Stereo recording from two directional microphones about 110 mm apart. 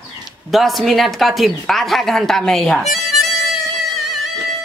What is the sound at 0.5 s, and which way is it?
Speech, centre (ahead or behind).